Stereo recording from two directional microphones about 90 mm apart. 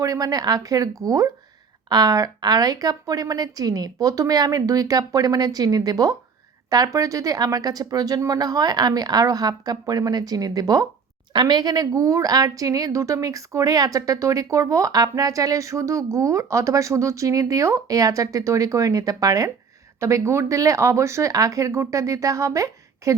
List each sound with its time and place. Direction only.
0.0 s a woman's voice: 40° right (ahead or behind)